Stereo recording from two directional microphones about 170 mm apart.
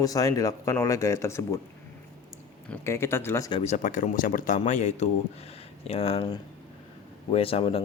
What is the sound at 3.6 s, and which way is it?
Speech, 45° left (ahead or behind).